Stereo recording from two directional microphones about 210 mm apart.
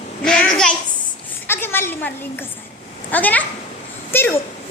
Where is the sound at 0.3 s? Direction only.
5° left (ahead or behind).